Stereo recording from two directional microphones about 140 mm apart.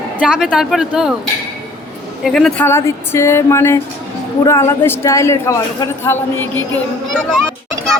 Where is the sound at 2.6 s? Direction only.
20° left (ahead or behind).